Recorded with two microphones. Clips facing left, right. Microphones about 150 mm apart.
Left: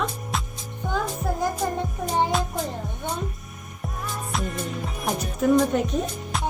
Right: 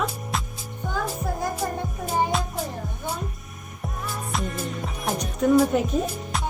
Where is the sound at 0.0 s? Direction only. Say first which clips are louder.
Even; centre (ahead or behind).